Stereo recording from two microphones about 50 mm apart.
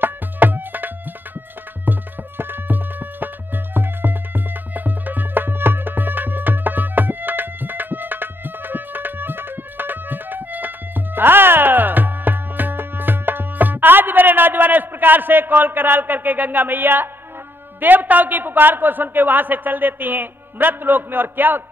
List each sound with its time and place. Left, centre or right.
0.0 s music: right
17.7 s a man's voice: right